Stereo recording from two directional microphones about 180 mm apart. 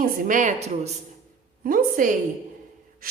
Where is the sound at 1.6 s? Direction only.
50° right (ahead or behind).